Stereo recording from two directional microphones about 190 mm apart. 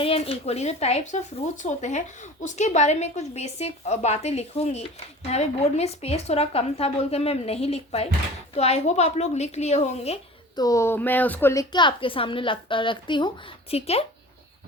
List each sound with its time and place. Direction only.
0.0 s a woman's voice: 30° left (ahead or behind)
10.5 s speech: 20° left (ahead or behind)
11.7 s a woman's voice: 25° left (ahead or behind)